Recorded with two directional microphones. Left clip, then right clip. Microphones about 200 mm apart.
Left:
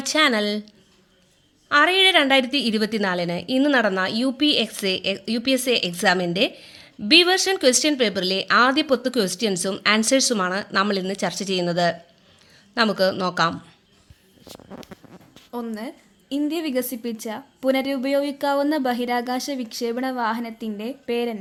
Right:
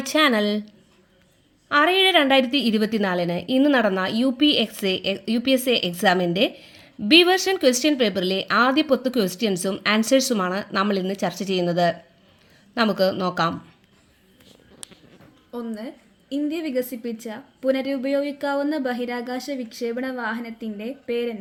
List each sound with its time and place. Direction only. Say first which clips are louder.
0.0 s a woman's voice: even; 10° right (ahead or behind)
1.7 s a woman's voice: left 1 dB; 10° right (ahead or behind)
15.5 s speech: left 1 dB; 45° left (ahead or behind)